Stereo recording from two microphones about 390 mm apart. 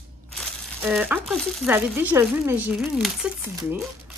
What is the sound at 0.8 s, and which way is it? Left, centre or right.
Speech, centre.